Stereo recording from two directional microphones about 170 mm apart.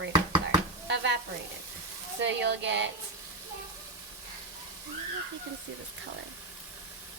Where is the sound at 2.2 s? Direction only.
90° right.